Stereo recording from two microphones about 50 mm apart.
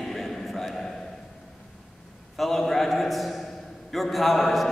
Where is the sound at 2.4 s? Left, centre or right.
Centre.